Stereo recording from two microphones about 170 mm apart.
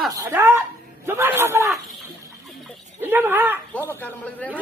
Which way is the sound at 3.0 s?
10° right (ahead or behind).